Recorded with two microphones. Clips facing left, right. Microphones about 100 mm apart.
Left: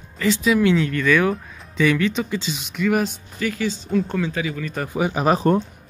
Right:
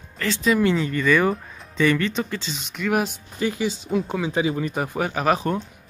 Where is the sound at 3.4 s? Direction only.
20° right (ahead or behind).